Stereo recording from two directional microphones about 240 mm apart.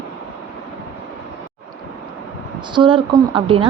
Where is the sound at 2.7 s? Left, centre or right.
Right.